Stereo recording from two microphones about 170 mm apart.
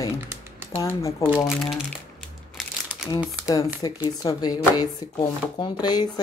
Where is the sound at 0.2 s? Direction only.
15° right (ahead or behind).